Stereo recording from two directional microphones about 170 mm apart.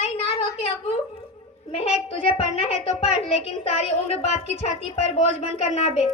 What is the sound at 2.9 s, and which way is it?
A woman's voice, 40° left (ahead or behind).